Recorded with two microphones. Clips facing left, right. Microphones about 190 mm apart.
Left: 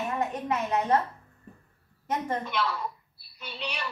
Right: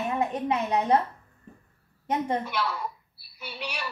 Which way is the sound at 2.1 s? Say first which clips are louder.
Right 2 dB; 15° right (ahead or behind).